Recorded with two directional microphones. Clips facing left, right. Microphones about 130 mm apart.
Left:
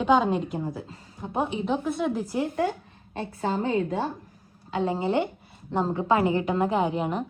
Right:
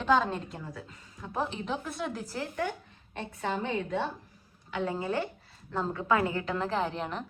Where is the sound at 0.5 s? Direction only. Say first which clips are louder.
Left 10 dB; 25° left (ahead or behind).